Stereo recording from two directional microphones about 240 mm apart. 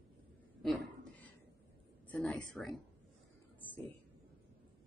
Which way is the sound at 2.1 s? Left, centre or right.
Centre.